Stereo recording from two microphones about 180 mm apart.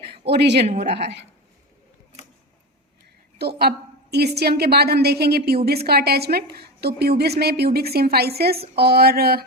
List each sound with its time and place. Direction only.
0.3 s speech: 65° right (ahead or behind)
3.3 s a woman's voice: 60° right (ahead or behind)